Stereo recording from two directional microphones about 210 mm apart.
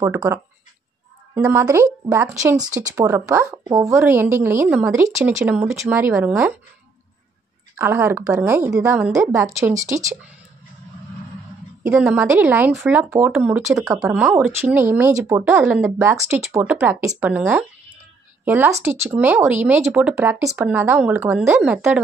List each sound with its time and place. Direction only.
0.0 s speech: 15° right (ahead or behind)
7.7 s speech: 10° right (ahead or behind)
9.0 s a woman's voice: centre (ahead or behind)
9.3 s speech: 15° right (ahead or behind)
11.8 s a woman's voice: 5° right (ahead or behind)